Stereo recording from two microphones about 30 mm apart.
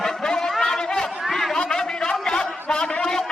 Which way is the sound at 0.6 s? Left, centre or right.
Left.